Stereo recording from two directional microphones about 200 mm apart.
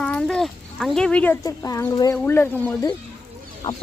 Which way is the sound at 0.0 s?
5° left (ahead or behind).